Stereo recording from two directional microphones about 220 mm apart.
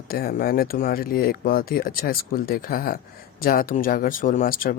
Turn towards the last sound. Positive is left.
turn(degrees=40)  # may be behind; listen again after turning